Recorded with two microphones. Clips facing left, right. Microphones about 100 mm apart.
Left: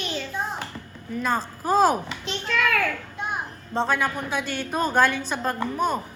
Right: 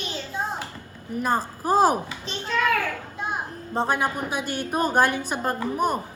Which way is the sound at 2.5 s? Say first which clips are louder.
Right 1 dB; 35° right (ahead or behind).